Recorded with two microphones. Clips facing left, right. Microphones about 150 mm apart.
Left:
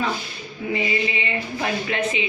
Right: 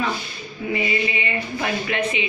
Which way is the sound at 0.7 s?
25° left (ahead or behind).